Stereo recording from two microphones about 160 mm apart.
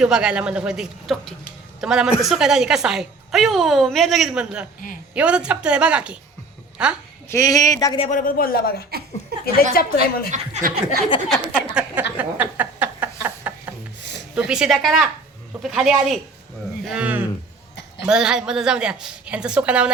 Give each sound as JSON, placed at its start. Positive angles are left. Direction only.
{"t": 0.0, "sound": "a woman's voice", "side_deg": -5}
{"t": 7.3, "sound": "speech", "side_deg": 20}
{"t": 8.1, "sound": "speech", "side_deg": 60}
{"t": 9.3, "sound": "speech", "side_deg": -80}
{"t": 9.7, "sound": "speech", "side_deg": 70}
{"t": 10.3, "sound": "speech", "side_deg": -45}
{"t": 11.3, "sound": "a woman's voice", "side_deg": -5}
{"t": 12.1, "sound": "a sound", "side_deg": -10}
{"t": 13.5, "sound": "rub", "side_deg": -10}
{"t": 14.3, "sound": "a woman's voice", "side_deg": -5}